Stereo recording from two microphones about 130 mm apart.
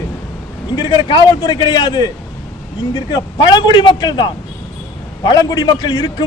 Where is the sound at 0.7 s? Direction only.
35° left (ahead or behind).